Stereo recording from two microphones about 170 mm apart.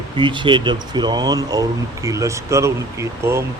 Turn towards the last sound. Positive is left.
turn(degrees=-15)  # may be behind; listen again after turning